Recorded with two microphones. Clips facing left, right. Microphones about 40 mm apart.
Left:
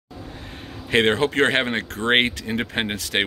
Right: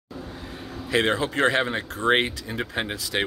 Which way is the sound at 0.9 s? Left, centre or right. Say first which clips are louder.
Left 4 dB; left.